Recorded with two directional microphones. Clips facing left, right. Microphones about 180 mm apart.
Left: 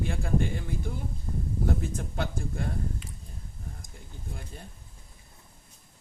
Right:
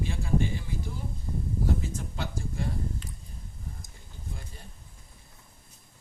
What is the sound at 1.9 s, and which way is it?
Speech, 55° left (ahead or behind).